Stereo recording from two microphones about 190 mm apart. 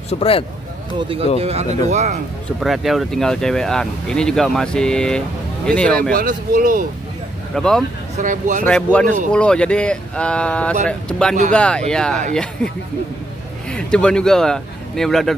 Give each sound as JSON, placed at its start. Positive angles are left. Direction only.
{"t": 0.1, "sound": "speech", "side_deg": 30}
{"t": 0.9, "sound": "speech", "side_deg": -25}
{"t": 2.6, "sound": "speech", "side_deg": 0}
{"t": 6.1, "sound": "speech", "side_deg": -45}
{"t": 7.5, "sound": "speech", "side_deg": 5}
{"t": 8.2, "sound": "speech", "side_deg": -45}
{"t": 8.6, "sound": "speech", "side_deg": 5}
{"t": 13.7, "sound": "speech", "side_deg": 5}